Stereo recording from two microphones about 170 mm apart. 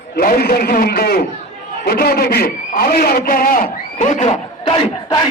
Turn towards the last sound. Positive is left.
turn(degrees=30)  # may be behind; listen again after turning